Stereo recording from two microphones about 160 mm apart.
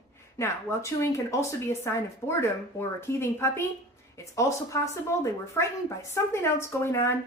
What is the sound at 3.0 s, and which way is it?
Speech, 15° left (ahead or behind).